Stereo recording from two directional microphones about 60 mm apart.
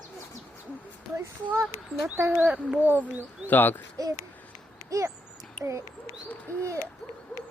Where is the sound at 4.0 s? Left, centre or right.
Right.